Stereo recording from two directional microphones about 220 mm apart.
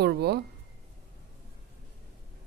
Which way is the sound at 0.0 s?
50° right (ahead or behind).